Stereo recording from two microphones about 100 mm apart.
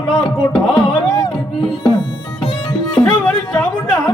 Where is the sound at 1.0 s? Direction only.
35° left (ahead or behind).